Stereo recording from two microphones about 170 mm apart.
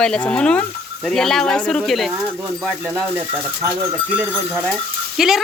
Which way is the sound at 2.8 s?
10° right (ahead or behind).